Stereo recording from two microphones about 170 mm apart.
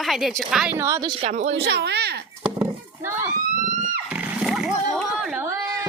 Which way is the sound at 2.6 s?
20° right (ahead or behind).